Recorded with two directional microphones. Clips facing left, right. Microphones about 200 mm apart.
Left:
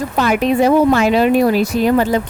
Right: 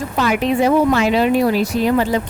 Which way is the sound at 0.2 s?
45° left (ahead or behind).